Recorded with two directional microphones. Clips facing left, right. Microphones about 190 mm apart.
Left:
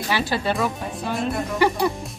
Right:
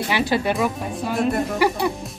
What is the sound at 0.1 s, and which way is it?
Speech, 20° right (ahead or behind).